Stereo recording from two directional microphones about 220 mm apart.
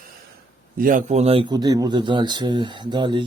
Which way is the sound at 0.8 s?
35° right (ahead or behind).